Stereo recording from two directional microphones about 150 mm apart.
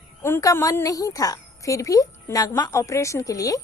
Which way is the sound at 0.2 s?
15° left (ahead or behind).